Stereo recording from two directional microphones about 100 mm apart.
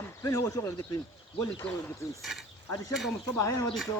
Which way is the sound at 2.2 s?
Centre (ahead or behind).